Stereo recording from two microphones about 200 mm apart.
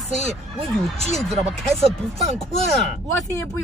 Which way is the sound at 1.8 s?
30° right (ahead or behind).